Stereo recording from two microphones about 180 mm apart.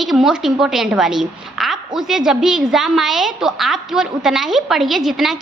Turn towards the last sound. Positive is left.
turn(degrees=0)  # may be behind; listen again after turning